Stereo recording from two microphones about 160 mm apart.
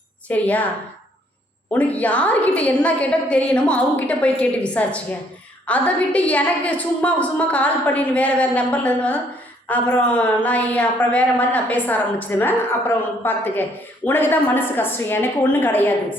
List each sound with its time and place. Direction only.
0.3 s a woman's voice: 10° left (ahead or behind)
1.7 s a woman's voice: 10° left (ahead or behind)